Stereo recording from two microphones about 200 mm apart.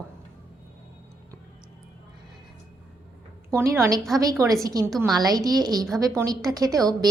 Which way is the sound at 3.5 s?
15° right (ahead or behind).